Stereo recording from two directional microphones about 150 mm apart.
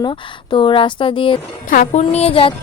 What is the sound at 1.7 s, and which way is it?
Speech, 55° left (ahead or behind).